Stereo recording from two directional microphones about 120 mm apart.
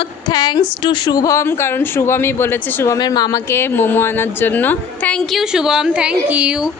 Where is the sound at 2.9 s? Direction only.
35° left (ahead or behind).